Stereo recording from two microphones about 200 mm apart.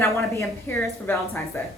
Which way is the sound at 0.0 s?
10° left (ahead or behind).